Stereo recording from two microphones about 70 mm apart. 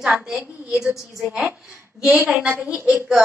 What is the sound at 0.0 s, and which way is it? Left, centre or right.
Speech, centre.